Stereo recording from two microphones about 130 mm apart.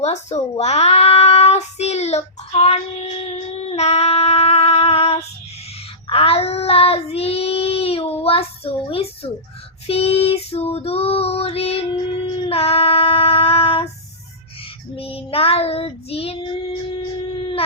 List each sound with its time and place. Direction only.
0.0 s a child's voice: 60° left (ahead or behind)
3.3 s female singing: 55° left (ahead or behind)
6.1 s child singing: 50° left (ahead or behind)
9.8 s female singing: 50° left (ahead or behind)
14.9 s child singing: 45° left (ahead or behind)